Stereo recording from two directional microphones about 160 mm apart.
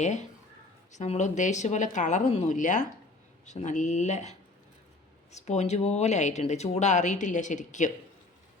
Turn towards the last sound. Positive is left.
turn(degrees=50)  # may be behind; listen again after turning